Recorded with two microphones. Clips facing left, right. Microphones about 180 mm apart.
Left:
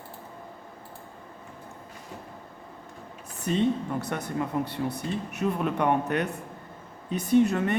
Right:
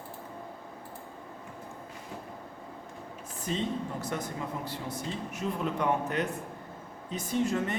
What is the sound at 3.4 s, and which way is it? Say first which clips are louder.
Speech: left 7 dB; 65° left (ahead or behind).